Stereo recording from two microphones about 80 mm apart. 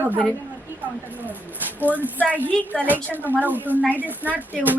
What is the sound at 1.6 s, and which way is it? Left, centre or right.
A woman's voice, right.